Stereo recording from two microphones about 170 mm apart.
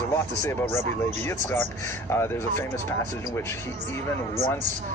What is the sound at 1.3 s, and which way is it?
Speech, 15° left (ahead or behind).